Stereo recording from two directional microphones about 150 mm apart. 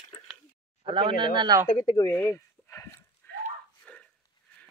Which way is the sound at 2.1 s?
15° left (ahead or behind).